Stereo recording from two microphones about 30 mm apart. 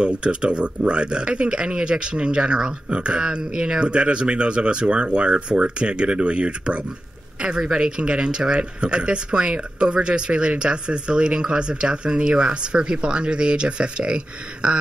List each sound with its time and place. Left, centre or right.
0.0 s speech: right
3.3 s speech: right
7.6 s speech: right